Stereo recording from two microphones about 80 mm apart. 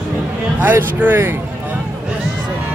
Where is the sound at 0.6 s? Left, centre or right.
Right.